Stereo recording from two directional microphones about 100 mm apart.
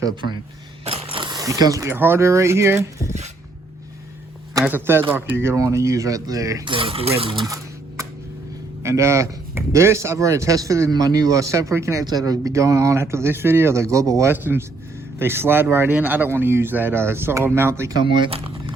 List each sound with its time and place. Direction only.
0.9 s a sound: 70° right (ahead or behind)
1.3 s speech: 35° right (ahead or behind)
1.9 s speech: 25° right (ahead or behind)
4.6 s speech: 20° right (ahead or behind); by 6.6 s 35° right (ahead or behind)
6.7 s speech: 60° right (ahead or behind)
8.8 s speech: 30° right (ahead or behind)
18.0 s speech: 55° right (ahead or behind)